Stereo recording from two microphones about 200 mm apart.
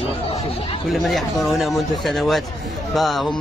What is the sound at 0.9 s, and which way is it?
A man's voice, centre (ahead or behind).